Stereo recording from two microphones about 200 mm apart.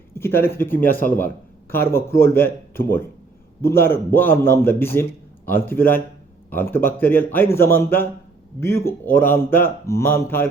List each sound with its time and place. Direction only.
0.1 s a sound: 10° left (ahead or behind)
0.4 s speech: 10° left (ahead or behind)
0.9 s a man's voice: 45° left (ahead or behind)
1.7 s speech: 10° left (ahead or behind)